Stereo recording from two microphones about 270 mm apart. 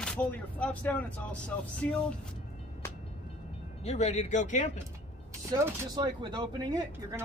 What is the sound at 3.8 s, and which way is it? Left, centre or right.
Speech, left.